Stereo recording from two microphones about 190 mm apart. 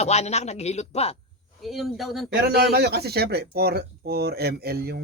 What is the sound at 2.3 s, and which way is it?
Speech, 55° right (ahead or behind).